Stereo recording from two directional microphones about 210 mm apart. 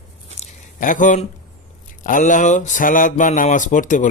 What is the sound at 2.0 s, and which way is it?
Speech, 40° left (ahead or behind).